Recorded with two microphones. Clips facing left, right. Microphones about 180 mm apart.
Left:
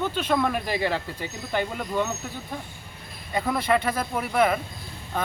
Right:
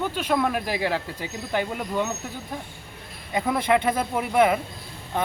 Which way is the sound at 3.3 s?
10° right (ahead or behind).